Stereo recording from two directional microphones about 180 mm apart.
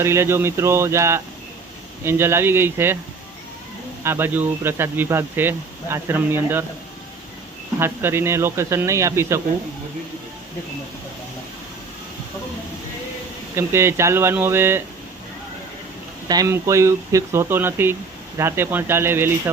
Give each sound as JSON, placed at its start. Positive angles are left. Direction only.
{"t": 0.0, "sound": "speech", "side_deg": -15}
{"t": 4.0, "sound": "speech", "side_deg": -10}
{"t": 7.8, "sound": "speech", "side_deg": -15}
{"t": 13.6, "sound": "speech", "side_deg": -15}
{"t": 16.3, "sound": "speech", "side_deg": -20}